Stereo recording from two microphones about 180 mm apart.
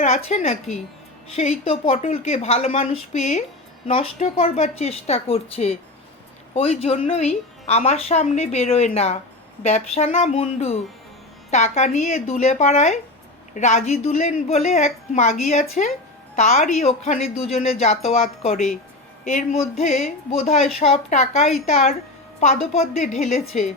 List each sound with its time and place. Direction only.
0.0 s a woman's voice: 40° left (ahead or behind)